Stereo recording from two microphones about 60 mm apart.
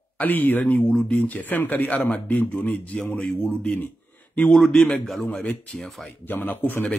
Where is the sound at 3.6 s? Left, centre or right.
Left.